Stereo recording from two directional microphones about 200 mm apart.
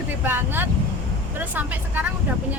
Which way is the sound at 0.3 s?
10° right (ahead or behind).